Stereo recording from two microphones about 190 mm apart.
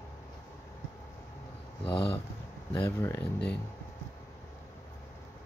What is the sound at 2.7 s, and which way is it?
Speech, 15° left (ahead or behind).